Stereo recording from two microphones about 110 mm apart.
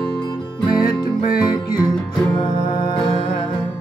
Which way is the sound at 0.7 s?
40° left (ahead or behind).